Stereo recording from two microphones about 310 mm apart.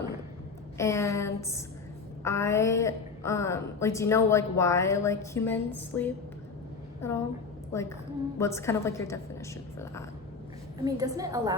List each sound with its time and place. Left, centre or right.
0.8 s a woman's voice: centre
10.8 s a woman's voice: centre